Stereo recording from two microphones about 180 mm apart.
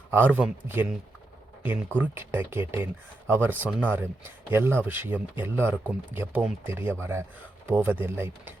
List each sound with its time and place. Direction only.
0.1 s speech: 10° right (ahead or behind)
2.0 s speech: 10° right (ahead or behind)